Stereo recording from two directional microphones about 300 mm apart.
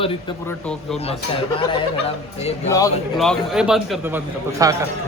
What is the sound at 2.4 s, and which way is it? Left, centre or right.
Speech, left.